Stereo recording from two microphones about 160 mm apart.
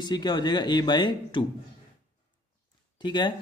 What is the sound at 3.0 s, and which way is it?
Speech, 30° left (ahead or behind).